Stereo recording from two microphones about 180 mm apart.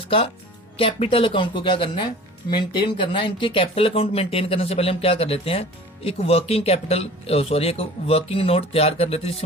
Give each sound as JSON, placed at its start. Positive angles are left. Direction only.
{"t": 0.8, "sound": "speech", "side_deg": 30}